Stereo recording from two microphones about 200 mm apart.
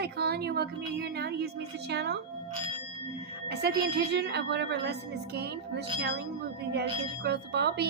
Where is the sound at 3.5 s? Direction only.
55° right (ahead or behind).